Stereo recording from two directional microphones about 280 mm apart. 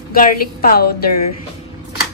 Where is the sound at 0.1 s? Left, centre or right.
Left.